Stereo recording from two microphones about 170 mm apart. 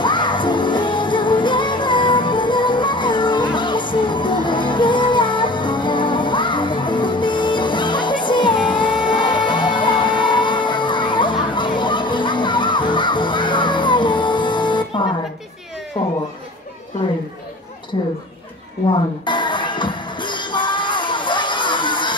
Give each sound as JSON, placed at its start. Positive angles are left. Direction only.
{"t": 0.0, "sound": "music", "side_deg": 25}
{"t": 18.9, "sound": "music", "side_deg": 25}